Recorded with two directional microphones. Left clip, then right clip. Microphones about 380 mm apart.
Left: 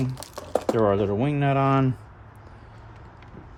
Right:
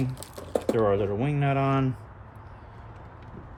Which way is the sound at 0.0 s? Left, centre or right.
Centre.